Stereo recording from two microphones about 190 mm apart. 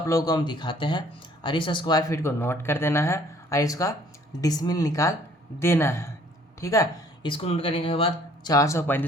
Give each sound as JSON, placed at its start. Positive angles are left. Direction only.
{"t": 0.0, "sound": "speech", "side_deg": 20}
{"t": 8.5, "sound": "speech", "side_deg": 15}